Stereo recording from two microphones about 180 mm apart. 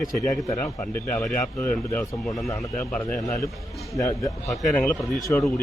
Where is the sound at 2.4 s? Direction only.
15° left (ahead or behind).